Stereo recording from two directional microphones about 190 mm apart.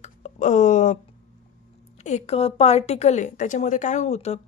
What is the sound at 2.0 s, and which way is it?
A woman's voice, 35° left (ahead or behind).